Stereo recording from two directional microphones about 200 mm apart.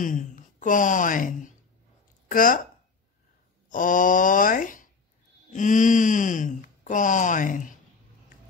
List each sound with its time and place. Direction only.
0.0 s a woman's voice: 40° left (ahead or behind)
3.6 s a woman's voice: 40° left (ahead or behind)